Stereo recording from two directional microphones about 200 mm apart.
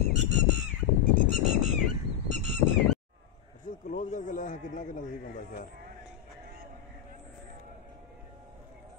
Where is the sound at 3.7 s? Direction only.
40° left (ahead or behind).